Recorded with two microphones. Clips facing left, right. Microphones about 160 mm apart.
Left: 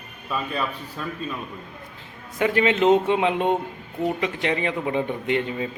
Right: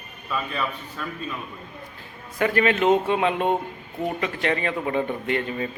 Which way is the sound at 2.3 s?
20° left (ahead or behind).